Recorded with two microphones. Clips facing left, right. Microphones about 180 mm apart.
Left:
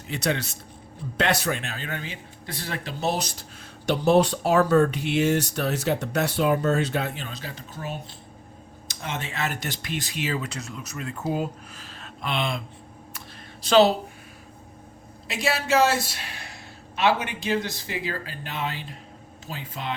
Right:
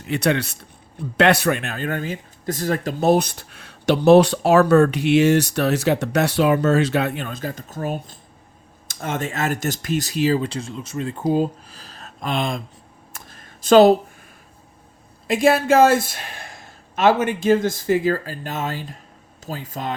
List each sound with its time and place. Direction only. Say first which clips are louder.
0.0 s speech: right 6 dB; 65° right (ahead or behind); by 12.6 s 45° right (ahead or behind)
13.1 s a sound: left 1 dB; 45° right (ahead or behind)
15.3 s speech: right 8 dB; 50° right (ahead or behind)